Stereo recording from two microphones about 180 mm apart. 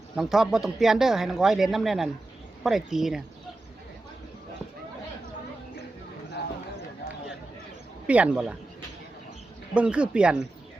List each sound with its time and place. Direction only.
0.2 s speech: centre (ahead or behind)
8.0 s speech: 10° right (ahead or behind)
9.7 s speech: 5° right (ahead or behind)